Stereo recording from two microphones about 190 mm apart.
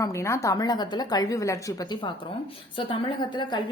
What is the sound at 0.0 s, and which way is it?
A woman's voice, 15° left (ahead or behind).